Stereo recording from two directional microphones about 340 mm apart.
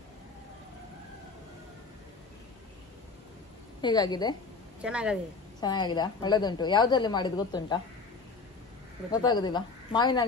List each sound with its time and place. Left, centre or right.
3.8 s a woman's voice: centre
4.8 s speech: centre
5.6 s a woman's voice: centre
9.1 s a woman's voice: centre